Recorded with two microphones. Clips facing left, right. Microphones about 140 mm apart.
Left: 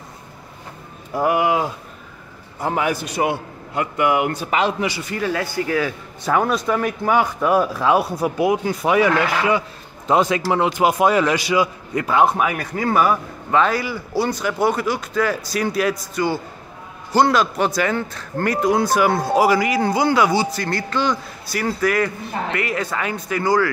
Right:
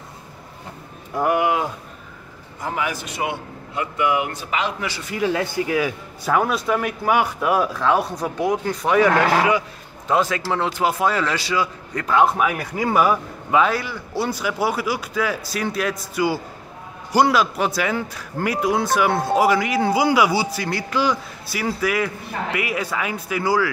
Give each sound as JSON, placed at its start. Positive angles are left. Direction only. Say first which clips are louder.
{"t": 1.1, "sound": "speech", "louder": "left 1 dB", "side_deg": 5}
{"t": 2.6, "sound": "a man's voice", "louder": "left 5 dB", "side_deg": 35}
{"t": 4.7, "sound": "speech", "louder": "left 5 dB", "side_deg": 15}
{"t": 5.1, "sound": "speech", "louder": "right 5 dB", "side_deg": -20}
{"t": 6.3, "sound": "a man's voice", "louder": "left 1 dB", "side_deg": -5}
{"t": 7.7, "sound": "speech", "louder": "left 2 dB", "side_deg": 10}
{"t": 10.0, "sound": "a man's voice", "louder": "left 3 dB", "side_deg": 20}